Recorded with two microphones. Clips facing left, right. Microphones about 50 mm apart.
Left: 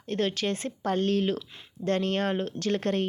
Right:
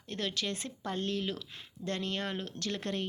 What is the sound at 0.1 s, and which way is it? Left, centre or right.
Speech, left.